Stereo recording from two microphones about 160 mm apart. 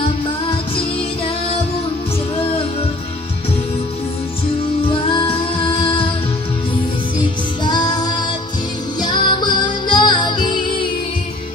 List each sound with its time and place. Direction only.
0.5 s music: 35° left (ahead or behind)
4.8 s music: 35° left (ahead or behind)
7.6 s music: 25° left (ahead or behind)